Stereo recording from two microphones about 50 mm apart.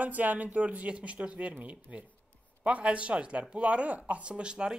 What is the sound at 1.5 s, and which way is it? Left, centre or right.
Speech, right.